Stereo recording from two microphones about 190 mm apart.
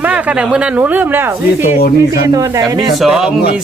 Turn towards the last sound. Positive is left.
turn(degrees=0)  # may be behind; listen again after turning